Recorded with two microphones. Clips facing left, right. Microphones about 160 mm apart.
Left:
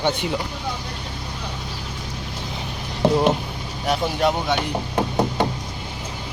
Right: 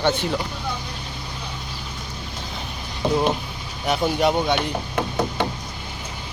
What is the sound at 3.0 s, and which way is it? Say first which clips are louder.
Speech: left 3 dB; 85° left.